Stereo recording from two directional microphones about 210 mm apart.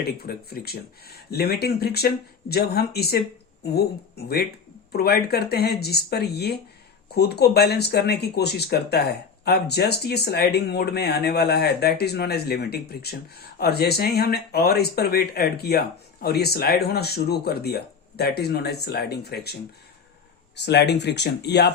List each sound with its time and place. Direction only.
0.0 s speech: 50° left (ahead or behind)
20.7 s speech: 55° left (ahead or behind)